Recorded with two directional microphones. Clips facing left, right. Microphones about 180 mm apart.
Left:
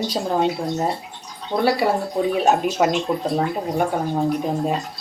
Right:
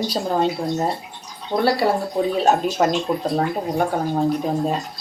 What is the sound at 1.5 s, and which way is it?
Speech, 15° left (ahead or behind).